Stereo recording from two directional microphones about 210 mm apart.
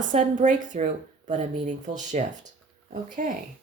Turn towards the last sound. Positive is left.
turn(degrees=-40)  # may be behind; listen again after turning